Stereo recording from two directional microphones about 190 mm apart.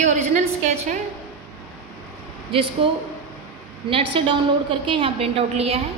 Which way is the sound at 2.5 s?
30° right (ahead or behind).